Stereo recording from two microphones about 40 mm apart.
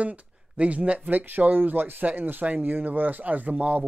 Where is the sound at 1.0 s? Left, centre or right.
Right.